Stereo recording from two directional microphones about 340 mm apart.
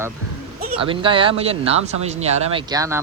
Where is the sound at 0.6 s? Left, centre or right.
Right.